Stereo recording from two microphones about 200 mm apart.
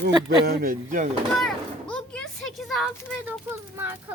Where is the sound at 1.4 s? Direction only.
5° left (ahead or behind).